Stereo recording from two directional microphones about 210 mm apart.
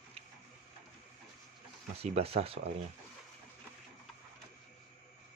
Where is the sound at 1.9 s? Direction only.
30° right (ahead or behind).